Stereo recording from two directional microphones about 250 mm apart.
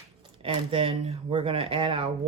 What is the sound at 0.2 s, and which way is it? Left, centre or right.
Speech, right.